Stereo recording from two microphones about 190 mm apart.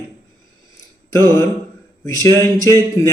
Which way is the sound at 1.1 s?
15° left (ahead or behind).